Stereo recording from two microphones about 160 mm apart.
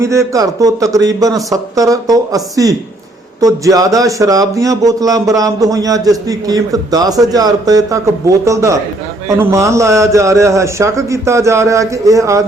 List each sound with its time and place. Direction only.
0.0 s speech: 20° right (ahead or behind)